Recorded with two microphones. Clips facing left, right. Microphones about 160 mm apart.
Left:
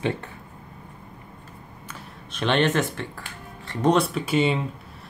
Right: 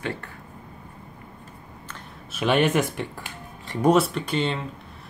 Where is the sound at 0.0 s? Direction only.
20° left (ahead or behind).